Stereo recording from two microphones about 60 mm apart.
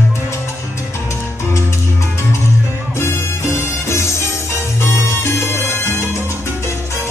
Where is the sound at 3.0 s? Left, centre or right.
Left.